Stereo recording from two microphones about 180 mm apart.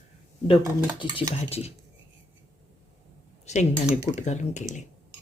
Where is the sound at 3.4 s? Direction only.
40° left (ahead or behind).